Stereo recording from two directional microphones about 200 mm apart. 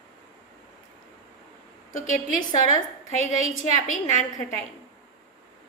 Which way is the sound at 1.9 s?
40° left (ahead or behind).